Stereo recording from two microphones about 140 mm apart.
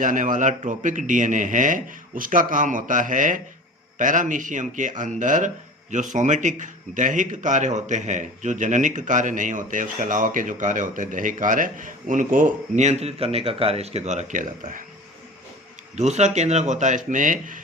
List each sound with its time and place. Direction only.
0.0 s a man's voice: 65° right (ahead or behind)
16.0 s a man's voice: 55° right (ahead or behind)